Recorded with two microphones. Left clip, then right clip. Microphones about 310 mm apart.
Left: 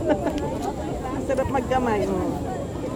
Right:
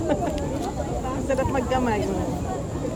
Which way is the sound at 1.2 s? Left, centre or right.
Left.